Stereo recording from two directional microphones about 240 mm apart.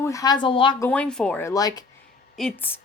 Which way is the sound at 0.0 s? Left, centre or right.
Centre.